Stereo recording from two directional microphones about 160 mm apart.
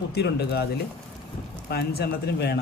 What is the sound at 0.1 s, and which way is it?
Speech, 90° left.